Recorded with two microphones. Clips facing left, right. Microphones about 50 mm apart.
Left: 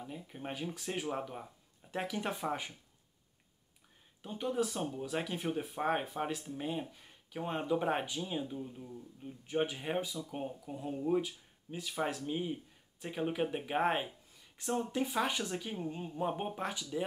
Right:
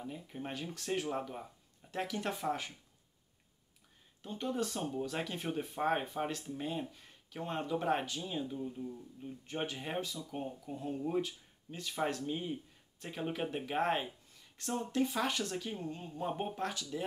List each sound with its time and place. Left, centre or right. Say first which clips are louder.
0.1 s speech: even; centre
4.2 s speech: left 2 dB; centre